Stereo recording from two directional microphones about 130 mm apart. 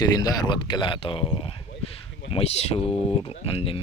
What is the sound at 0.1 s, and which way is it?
Speech, 30° left (ahead or behind).